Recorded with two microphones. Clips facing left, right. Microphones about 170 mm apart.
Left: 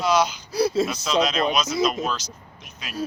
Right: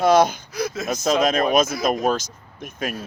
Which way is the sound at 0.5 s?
30° left (ahead or behind).